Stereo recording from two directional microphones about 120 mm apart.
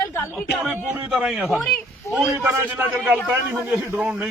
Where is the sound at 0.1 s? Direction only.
20° left (ahead or behind).